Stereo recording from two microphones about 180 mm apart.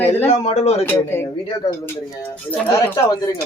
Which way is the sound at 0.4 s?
35° left (ahead or behind).